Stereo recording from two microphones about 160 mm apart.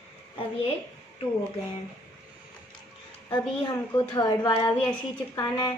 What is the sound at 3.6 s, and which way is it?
Speech, 25° left (ahead or behind).